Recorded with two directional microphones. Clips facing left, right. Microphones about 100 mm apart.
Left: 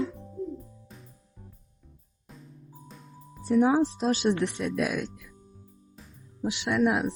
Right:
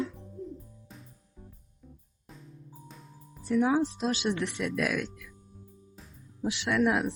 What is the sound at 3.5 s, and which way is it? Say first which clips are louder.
Speech: left 3 dB; 30° left (ahead or behind).